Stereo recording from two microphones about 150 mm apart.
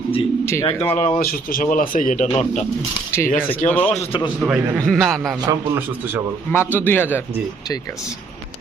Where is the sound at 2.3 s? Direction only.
45° left (ahead or behind).